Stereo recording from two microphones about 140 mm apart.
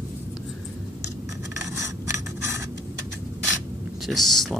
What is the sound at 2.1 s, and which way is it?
Scissors, 20° right (ahead or behind).